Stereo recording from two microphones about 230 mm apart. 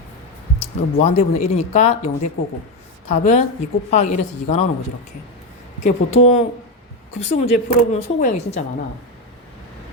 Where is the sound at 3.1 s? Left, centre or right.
Left.